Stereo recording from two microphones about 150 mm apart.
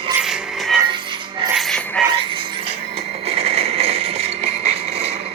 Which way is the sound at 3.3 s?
40° right (ahead or behind).